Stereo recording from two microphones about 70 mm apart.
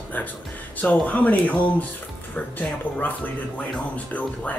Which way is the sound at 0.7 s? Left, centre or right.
Left.